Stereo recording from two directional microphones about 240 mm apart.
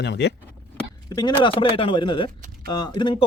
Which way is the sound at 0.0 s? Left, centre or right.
Left.